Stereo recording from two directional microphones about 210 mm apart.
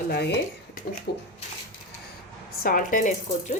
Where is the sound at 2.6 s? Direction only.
40° left (ahead or behind).